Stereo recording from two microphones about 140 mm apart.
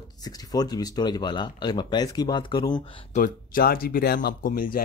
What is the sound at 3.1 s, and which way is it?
Speech, 85° left.